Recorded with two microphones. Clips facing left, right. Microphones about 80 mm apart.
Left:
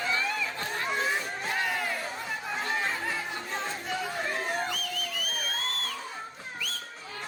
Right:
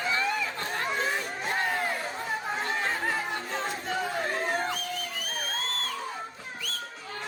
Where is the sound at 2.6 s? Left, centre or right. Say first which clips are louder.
Even; right.